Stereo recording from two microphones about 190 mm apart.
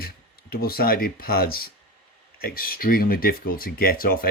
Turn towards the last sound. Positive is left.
turn(degrees=50)  # may be behind; listen again after turning